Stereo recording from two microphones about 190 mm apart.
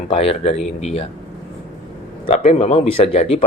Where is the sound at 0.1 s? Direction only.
30° left (ahead or behind).